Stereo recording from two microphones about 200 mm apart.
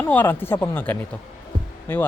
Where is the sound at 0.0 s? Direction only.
10° left (ahead or behind).